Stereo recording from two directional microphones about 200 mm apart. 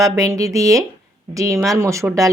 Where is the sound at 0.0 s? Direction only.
15° right (ahead or behind).